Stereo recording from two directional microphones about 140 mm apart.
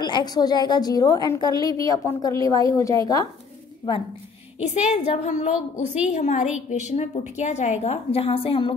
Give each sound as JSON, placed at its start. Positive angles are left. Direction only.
{"t": 0.0, "sound": "a woman's voice", "side_deg": 30}
{"t": 4.6, "sound": "a woman's voice", "side_deg": 55}